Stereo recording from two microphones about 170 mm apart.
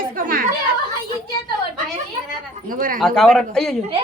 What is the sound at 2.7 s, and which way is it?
Speech, 55° right (ahead or behind).